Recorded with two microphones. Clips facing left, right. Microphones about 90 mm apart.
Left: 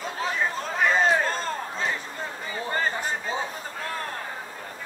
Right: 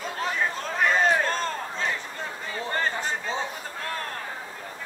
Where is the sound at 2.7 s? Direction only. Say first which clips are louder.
Left 1 dB; 10° left (ahead or behind).